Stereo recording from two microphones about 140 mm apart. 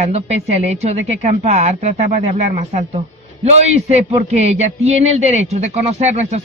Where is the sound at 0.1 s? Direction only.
50° right (ahead or behind).